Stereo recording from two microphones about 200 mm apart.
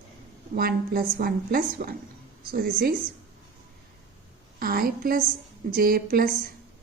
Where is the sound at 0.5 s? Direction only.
50° right (ahead or behind).